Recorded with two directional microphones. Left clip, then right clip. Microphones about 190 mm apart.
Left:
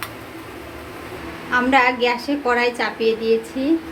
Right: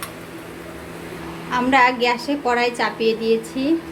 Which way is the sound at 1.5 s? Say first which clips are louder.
Even; 10° right (ahead or behind).